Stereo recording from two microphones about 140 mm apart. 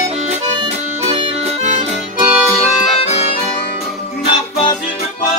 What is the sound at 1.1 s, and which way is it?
Music, 50° right (ahead or behind).